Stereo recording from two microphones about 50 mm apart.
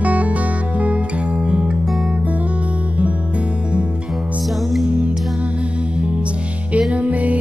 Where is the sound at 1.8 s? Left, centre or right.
Centre.